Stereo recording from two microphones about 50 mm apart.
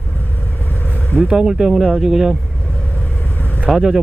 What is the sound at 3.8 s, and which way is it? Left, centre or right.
Speech, centre.